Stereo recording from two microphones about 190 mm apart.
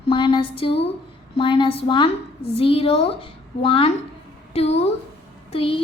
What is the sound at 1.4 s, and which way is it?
A woman's voice, 25° left (ahead or behind).